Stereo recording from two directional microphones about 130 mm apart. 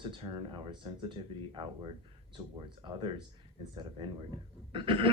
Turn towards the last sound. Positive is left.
turn(degrees=-40)  # may be behind; listen again after turning